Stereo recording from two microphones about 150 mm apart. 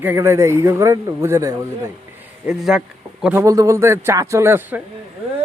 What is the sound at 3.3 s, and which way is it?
Speech, 20° right (ahead or behind).